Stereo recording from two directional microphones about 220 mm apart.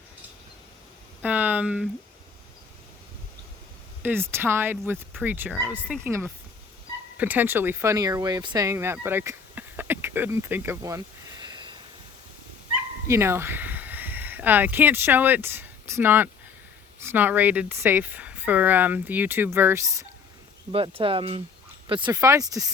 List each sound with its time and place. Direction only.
1.2 s a sound: 10° right (ahead or behind)
4.0 s speech: 10° right (ahead or behind)
13.1 s speech: 10° right (ahead or behind)
20.7 s speech: 25° right (ahead or behind)